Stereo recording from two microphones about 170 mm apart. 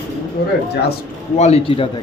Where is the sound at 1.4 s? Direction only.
40° left (ahead or behind).